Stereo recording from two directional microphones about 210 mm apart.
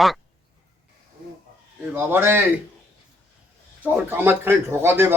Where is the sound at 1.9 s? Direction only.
10° right (ahead or behind).